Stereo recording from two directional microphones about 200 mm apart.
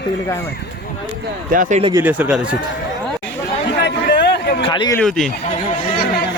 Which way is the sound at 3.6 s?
60° left (ahead or behind).